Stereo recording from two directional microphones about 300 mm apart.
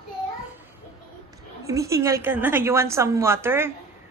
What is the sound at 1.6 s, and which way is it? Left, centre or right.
A woman's voice, centre.